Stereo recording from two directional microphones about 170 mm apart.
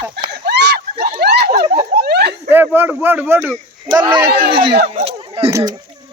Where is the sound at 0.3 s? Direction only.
80° right.